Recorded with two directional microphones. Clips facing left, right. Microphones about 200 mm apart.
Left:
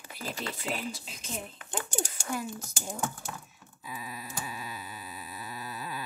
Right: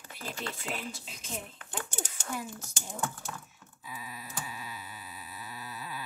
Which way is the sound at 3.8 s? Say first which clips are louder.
Left 3 dB; 45° left (ahead or behind).